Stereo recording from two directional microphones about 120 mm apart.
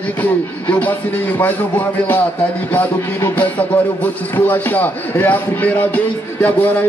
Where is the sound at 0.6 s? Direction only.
15° left (ahead or behind).